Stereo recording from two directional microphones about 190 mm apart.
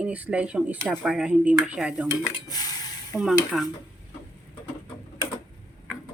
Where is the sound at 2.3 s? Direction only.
20° left (ahead or behind).